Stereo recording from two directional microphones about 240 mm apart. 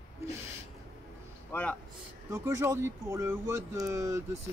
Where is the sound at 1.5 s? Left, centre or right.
Centre.